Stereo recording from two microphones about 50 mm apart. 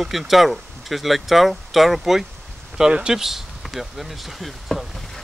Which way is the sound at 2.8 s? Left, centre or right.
Centre.